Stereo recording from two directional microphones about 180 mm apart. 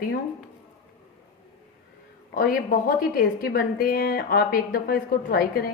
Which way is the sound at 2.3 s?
50° left (ahead or behind).